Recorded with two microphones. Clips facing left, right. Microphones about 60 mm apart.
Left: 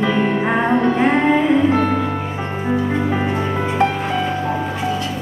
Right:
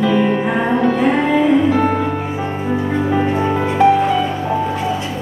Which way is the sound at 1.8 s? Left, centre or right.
Centre.